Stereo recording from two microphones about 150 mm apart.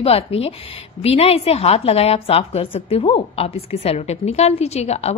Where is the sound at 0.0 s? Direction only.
40° left (ahead or behind).